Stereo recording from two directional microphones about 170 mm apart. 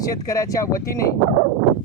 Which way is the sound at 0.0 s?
20° left (ahead or behind).